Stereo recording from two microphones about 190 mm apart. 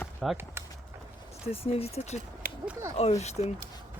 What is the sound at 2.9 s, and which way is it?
Speech, 35° left (ahead or behind).